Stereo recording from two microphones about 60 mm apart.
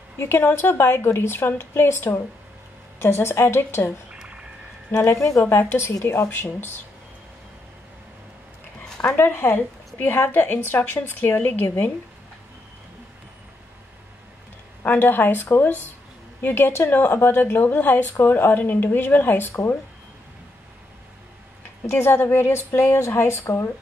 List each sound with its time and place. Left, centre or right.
0.2 s a woman's voice: left
4.1 s a sound: centre
4.9 s a woman's voice: left
9.2 s speech: left
14.9 s speech: left
21.8 s a woman's voice: left